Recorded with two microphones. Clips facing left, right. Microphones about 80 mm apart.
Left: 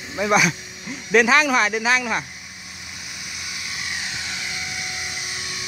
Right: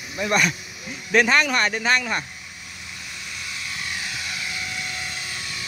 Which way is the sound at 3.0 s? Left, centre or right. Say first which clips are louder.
Even; centre.